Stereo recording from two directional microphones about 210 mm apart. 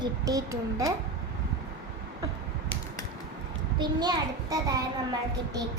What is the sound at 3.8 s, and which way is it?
A child's voice, 20° right (ahead or behind).